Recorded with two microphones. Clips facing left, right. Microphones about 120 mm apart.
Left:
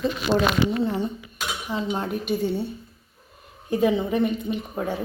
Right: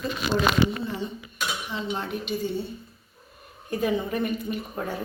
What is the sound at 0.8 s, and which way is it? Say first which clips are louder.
Speech: left 6 dB; 60° left (ahead or behind).